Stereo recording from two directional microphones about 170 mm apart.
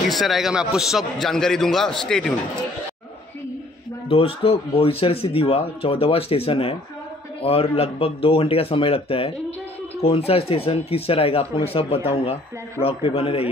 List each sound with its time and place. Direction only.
0.1 s a man's voice: centre (ahead or behind)
4.1 s speech: 30° left (ahead or behind)